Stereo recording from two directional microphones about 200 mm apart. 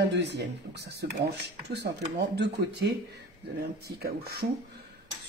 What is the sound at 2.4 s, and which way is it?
Speech, 55° right (ahead or behind).